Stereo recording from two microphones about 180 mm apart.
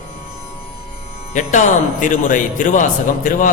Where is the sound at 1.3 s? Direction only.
45° left (ahead or behind).